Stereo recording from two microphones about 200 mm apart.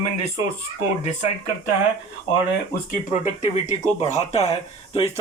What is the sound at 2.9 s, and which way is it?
Speech, 40° left (ahead or behind).